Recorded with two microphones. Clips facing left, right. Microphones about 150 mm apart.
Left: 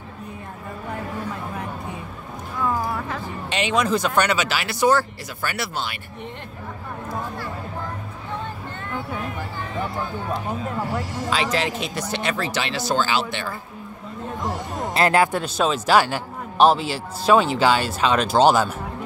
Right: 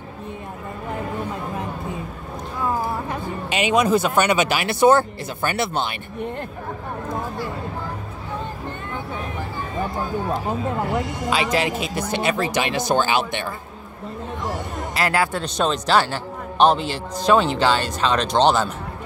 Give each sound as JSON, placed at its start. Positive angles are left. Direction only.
{"t": 3.1, "sound": "speech", "side_deg": -10}
{"t": 10.9, "sound": "speech", "side_deg": -10}
{"t": 15.0, "sound": "speech", "side_deg": 20}
{"t": 15.4, "sound": "a man's voice", "side_deg": 5}